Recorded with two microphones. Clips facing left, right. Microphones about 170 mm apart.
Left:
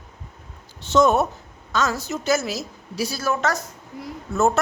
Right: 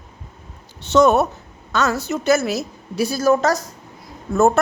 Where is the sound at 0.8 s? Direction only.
70° right (ahead or behind); by 3.6 s 35° right (ahead or behind).